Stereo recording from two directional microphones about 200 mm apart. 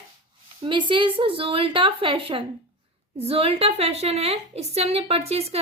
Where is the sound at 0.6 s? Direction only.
25° right (ahead or behind).